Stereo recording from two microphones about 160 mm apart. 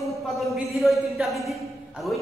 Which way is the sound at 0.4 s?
Centre (ahead or behind).